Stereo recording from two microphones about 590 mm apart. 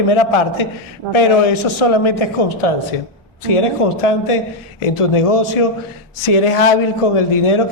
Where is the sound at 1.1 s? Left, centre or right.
Left.